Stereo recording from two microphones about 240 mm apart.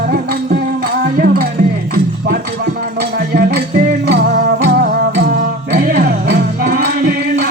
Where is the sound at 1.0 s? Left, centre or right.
Right.